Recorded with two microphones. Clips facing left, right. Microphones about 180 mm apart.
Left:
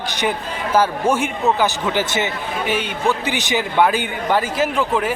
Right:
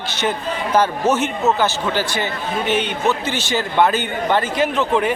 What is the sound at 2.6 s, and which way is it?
A man's voice, 10° left (ahead or behind).